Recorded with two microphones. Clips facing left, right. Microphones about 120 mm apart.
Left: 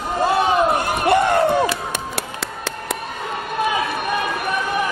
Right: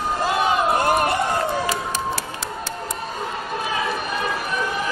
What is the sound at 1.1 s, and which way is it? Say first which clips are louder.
Music: left 6 dB; 65° left (ahead or behind).